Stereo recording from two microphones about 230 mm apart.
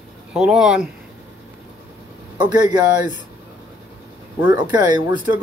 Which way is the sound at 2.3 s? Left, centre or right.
Centre.